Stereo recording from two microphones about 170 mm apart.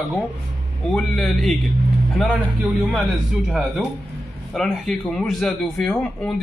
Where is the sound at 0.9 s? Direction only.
5° left (ahead or behind).